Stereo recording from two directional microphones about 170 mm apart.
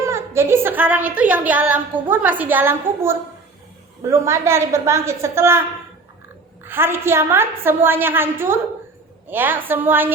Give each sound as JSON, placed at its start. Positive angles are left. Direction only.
{"t": 0.0, "sound": "a woman's voice", "side_deg": -15}
{"t": 6.7, "sound": "a woman's voice", "side_deg": -15}